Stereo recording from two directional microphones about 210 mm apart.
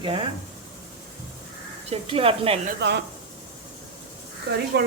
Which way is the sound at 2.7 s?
55° right (ahead or behind).